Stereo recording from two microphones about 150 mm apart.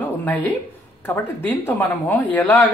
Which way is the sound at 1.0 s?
15° left (ahead or behind).